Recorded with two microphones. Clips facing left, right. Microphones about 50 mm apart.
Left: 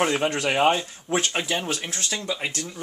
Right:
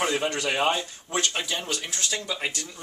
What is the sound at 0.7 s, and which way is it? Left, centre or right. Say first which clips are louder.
Speech: left 3 dB; centre.